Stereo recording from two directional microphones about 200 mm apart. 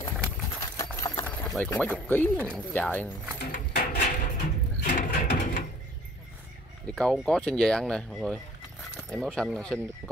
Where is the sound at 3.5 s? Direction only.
45° left (ahead or behind).